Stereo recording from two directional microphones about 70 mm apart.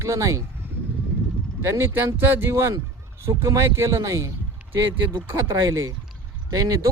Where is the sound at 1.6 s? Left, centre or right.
Right.